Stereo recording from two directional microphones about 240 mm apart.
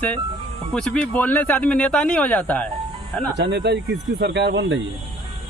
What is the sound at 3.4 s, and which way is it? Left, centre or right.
Speech, right.